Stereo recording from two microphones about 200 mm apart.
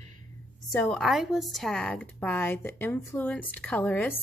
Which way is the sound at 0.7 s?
10° left (ahead or behind).